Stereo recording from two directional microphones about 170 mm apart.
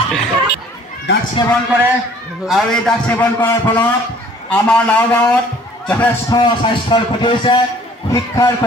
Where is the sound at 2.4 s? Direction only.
Centre (ahead or behind).